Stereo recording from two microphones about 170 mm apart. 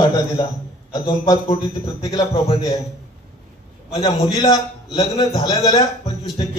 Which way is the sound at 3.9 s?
25° left (ahead or behind).